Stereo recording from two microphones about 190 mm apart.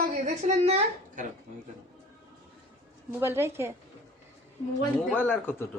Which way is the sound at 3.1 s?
15° right (ahead or behind).